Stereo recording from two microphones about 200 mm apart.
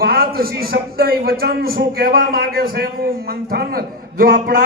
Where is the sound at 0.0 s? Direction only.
50° right (ahead or behind).